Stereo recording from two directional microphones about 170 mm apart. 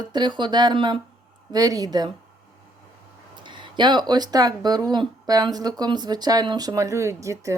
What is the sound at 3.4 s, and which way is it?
Speech, 30° right (ahead or behind).